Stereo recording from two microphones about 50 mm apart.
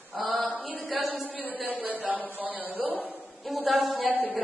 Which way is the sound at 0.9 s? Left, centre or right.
Centre.